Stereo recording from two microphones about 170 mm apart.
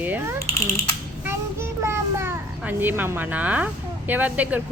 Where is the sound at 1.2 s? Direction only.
15° right (ahead or behind).